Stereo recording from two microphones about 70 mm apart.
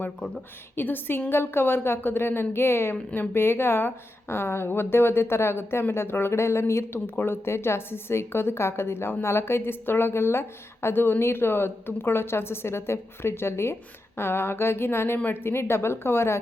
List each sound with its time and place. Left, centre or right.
0.8 s a woman's voice: left
2.9 s speech: centre
3.3 s a woman's voice: left